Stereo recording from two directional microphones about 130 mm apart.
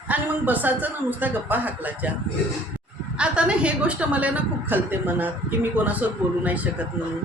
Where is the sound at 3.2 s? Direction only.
10° right (ahead or behind).